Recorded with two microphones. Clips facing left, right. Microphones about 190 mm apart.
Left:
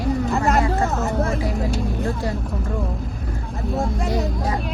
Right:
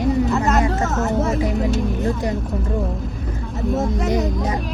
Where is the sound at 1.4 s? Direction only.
20° right (ahead or behind).